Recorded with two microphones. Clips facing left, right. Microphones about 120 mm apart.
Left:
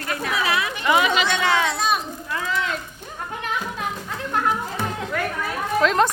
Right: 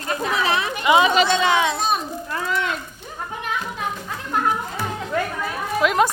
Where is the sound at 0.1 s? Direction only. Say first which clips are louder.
Right 2 dB; 25° right (ahead or behind).